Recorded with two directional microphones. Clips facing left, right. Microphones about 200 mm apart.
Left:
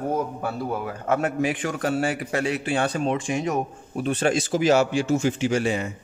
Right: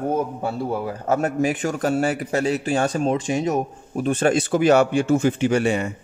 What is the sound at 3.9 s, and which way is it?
Speech, 45° right (ahead or behind).